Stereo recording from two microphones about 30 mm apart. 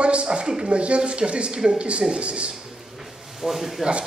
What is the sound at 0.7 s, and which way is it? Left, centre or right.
Speech, right.